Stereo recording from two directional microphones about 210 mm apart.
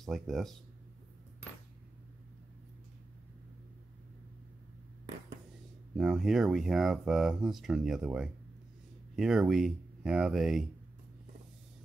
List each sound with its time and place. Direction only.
0.0 s speech: centre (ahead or behind)
5.9 s speech: centre (ahead or behind)